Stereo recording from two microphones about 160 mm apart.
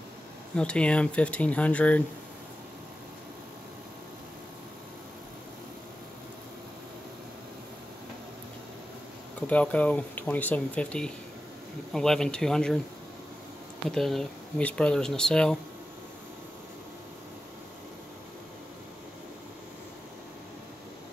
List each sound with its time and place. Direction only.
0.6 s speech: 5° left (ahead or behind)
9.5 s speech: 10° left (ahead or behind)
13.8 s speech: centre (ahead or behind)